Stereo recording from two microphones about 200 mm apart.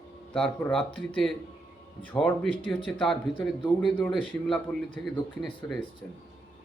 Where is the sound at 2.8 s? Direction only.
5° left (ahead or behind).